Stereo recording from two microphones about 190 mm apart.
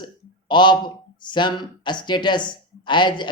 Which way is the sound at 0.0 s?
25° left (ahead or behind).